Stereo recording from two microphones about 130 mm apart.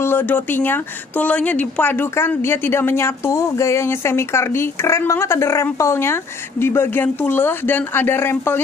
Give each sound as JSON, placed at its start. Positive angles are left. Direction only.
{"t": 0.0, "sound": "speech", "side_deg": 15}